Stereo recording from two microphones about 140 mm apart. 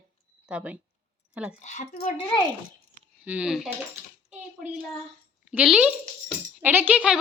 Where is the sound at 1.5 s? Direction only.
60° left (ahead or behind).